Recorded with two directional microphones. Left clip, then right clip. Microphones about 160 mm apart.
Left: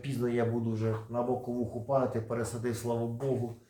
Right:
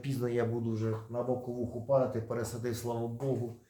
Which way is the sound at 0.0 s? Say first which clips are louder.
Left 1 dB; 35° right (ahead or behind).